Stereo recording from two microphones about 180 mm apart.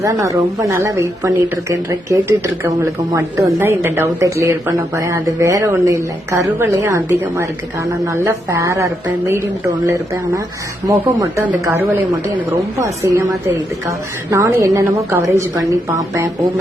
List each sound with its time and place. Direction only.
0.0 s speech: 20° right (ahead or behind)